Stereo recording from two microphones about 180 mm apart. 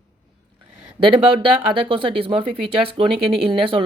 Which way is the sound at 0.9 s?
30° right (ahead or behind).